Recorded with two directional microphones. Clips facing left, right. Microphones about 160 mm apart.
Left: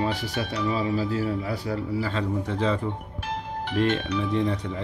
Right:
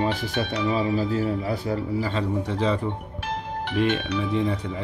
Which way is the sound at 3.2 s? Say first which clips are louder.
Right 1 dB; 70° right (ahead or behind).